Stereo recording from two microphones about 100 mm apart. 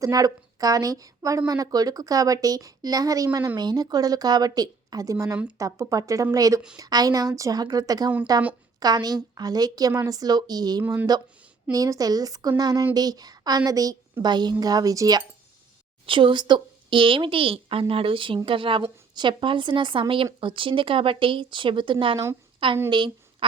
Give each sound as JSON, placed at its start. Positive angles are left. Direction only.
{"t": 0.0, "sound": "a woman's voice", "side_deg": -35}
{"t": 16.0, "sound": "a woman's voice", "side_deg": -60}